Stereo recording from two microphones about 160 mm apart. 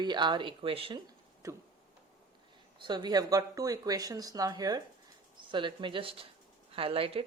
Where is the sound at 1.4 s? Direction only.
20° right (ahead or behind).